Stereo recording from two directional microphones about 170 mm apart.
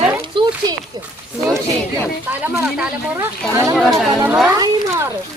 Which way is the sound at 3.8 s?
Centre (ahead or behind).